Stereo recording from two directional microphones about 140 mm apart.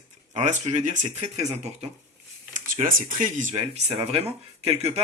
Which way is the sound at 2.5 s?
70° right (ahead or behind).